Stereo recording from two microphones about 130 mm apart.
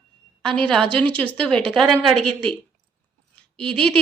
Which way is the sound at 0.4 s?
10° left (ahead or behind).